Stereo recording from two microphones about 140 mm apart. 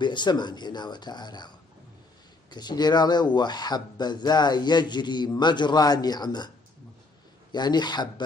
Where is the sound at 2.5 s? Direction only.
30° left (ahead or behind).